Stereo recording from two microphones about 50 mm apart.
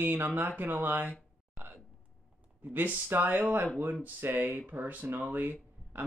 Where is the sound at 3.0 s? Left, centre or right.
Right.